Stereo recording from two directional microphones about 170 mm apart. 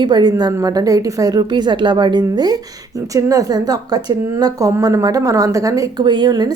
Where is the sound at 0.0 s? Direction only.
25° right (ahead or behind).